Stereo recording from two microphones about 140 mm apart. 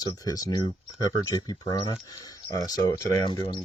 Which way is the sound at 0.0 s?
25° left (ahead or behind).